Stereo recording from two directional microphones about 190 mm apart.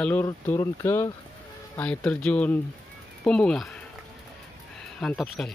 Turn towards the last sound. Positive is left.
turn(degrees=0)  # may be behind; listen again after turning